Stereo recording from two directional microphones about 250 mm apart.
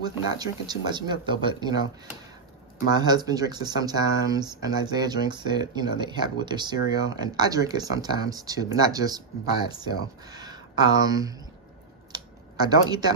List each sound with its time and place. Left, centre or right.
0.0 s speech: centre
2.9 s speech: centre
12.1 s computer keyboard: centre